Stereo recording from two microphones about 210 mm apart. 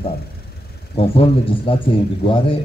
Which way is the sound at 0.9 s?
25° left (ahead or behind).